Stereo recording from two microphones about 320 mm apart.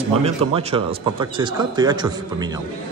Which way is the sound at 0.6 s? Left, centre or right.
Centre.